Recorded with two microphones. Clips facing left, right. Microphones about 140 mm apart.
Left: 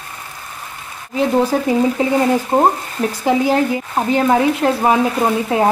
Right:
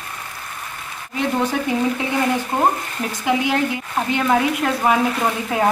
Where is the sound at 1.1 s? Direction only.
35° left (ahead or behind).